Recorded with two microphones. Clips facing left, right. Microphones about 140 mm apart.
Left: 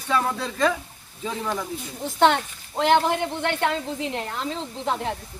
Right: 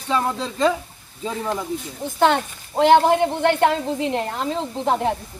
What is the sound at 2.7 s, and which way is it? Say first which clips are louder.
A woman's voice: right 6 dB; 40° right (ahead or behind).